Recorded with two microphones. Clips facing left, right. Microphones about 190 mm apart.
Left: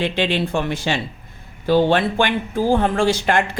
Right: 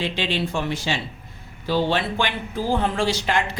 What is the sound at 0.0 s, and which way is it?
Speech, 55° left (ahead or behind).